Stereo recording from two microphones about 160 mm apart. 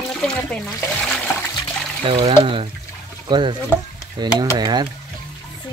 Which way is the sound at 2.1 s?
35° right (ahead or behind).